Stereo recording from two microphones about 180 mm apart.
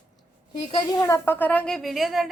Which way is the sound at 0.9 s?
15° left (ahead or behind).